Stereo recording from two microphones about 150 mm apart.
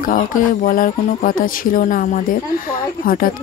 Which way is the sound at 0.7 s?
65° left (ahead or behind).